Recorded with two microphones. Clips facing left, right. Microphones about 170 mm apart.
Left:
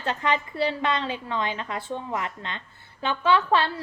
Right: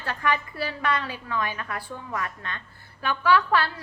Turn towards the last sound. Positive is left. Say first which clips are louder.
# even
turn(degrees=25)  # may be behind; listen again after turning